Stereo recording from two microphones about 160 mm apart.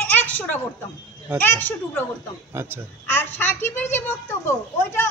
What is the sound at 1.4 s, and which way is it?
Speech, 10° left (ahead or behind).